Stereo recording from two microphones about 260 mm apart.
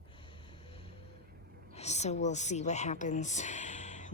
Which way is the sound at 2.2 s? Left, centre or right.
Left.